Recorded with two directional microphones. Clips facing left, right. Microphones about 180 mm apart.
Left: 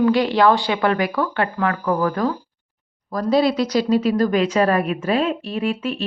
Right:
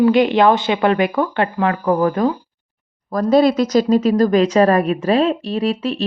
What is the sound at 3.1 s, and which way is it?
Speech, 50° right (ahead or behind).